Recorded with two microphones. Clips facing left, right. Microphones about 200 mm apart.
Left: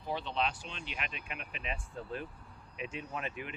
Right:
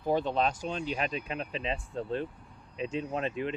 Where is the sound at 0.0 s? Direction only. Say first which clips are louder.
Right 7 dB; 45° right (ahead or behind).